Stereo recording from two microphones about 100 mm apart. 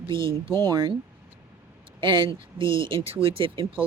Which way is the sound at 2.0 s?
55° right (ahead or behind).